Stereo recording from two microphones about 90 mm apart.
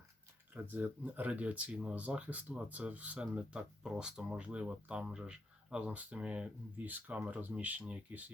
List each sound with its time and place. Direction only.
0.5 s speech: 20° right (ahead or behind)